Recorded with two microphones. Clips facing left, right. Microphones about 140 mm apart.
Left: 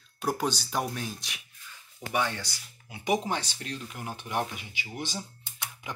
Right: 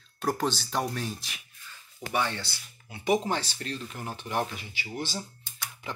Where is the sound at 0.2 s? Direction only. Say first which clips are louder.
Right 1 dB; centre (ahead or behind).